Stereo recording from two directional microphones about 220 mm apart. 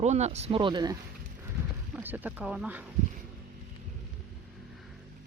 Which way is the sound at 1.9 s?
10° right (ahead or behind).